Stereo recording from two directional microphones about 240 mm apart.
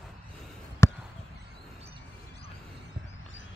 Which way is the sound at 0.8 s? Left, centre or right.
Centre.